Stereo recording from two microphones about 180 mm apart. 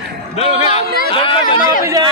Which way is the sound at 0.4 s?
35° left (ahead or behind).